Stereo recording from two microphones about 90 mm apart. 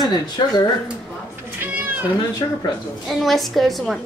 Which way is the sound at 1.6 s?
20° right (ahead or behind).